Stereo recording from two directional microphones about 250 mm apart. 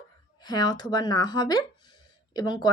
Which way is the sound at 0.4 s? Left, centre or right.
Centre.